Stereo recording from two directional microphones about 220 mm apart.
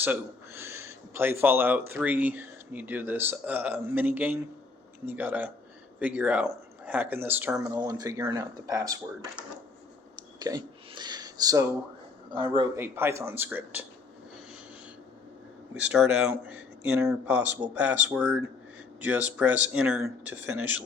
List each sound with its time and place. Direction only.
0.0 s speech: 10° right (ahead or behind)
10.4 s a sound: 20° right (ahead or behind)
12.3 s speech: 20° right (ahead or behind)
15.7 s speech: 5° right (ahead or behind)